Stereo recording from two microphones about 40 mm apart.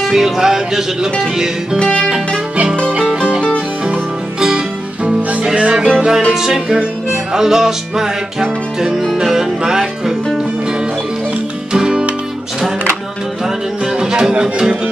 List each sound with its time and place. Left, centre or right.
0.0 s music: centre
1.8 s music: left
3.2 s music: right
5.4 s music: right
5.9 s music: centre
11.7 s guitar: right
13.9 s music: centre